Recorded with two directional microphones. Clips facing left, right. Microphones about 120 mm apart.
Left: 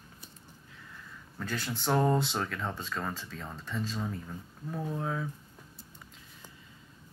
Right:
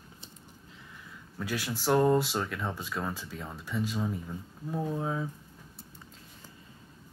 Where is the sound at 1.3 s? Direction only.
5° right (ahead or behind).